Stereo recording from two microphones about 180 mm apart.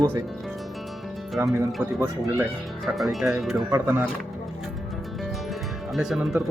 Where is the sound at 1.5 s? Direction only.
10° right (ahead or behind).